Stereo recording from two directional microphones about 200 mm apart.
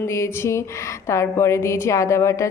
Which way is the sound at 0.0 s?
15° left (ahead or behind).